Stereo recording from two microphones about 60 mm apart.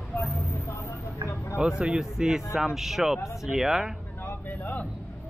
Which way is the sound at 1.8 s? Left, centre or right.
Centre.